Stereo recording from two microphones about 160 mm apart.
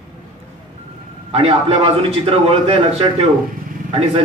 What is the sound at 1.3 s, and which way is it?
A man's voice, 40° right (ahead or behind).